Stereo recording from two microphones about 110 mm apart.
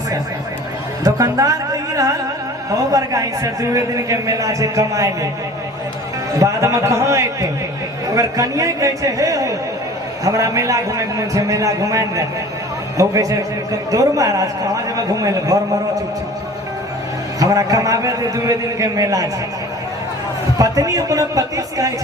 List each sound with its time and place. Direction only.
1.0 s music: 30° right (ahead or behind)
2.7 s a man's voice: 30° right (ahead or behind)
6.3 s a man's voice: 30° right (ahead or behind)
17.4 s a man's voice: 30° right (ahead or behind)
20.6 s a man's voice: 30° right (ahead or behind)